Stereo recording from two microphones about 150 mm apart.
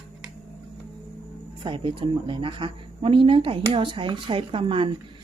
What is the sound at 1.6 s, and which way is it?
A woman's voice, 35° right (ahead or behind).